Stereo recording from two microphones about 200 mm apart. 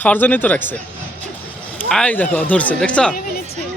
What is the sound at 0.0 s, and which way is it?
Speech, 10° left (ahead or behind).